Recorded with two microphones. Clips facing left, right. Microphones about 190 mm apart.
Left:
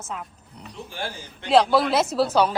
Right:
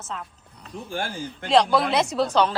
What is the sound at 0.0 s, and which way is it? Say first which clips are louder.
Speech: left 1 dB; 10° left (ahead or behind).